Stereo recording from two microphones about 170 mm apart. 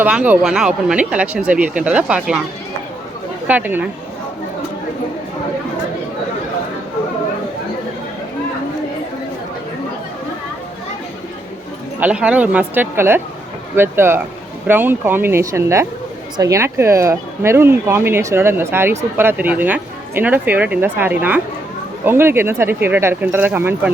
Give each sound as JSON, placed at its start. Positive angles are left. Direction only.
{"t": 0.0, "sound": "speech", "side_deg": -10}
{"t": 3.4, "sound": "speech", "side_deg": -10}
{"t": 11.9, "sound": "speech", "side_deg": -10}